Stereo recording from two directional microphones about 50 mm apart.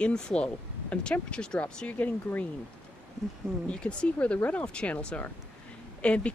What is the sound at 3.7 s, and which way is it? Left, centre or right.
Speech, left.